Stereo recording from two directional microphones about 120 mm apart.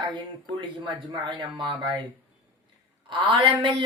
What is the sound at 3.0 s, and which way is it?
Speech, 40° right (ahead or behind).